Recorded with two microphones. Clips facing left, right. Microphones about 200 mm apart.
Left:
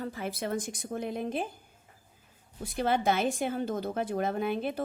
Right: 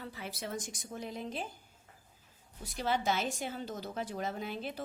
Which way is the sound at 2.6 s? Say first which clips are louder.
Left 5 dB; 55° left (ahead or behind).